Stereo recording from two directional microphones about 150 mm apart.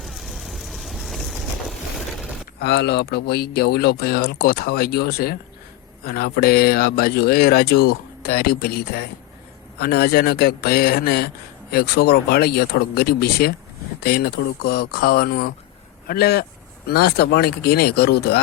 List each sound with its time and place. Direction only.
0.0 s vehicle: centre (ahead or behind)
2.6 s speech: 90° left